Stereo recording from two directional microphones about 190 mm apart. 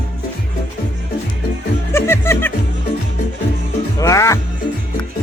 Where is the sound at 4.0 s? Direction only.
15° left (ahead or behind).